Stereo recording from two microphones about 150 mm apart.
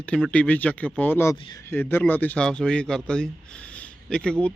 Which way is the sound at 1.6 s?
15° left (ahead or behind).